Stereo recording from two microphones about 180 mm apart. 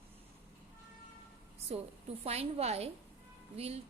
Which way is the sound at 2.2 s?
35° right (ahead or behind).